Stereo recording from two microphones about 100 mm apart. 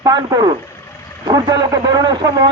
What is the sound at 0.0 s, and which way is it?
A man's voice, 40° right (ahead or behind).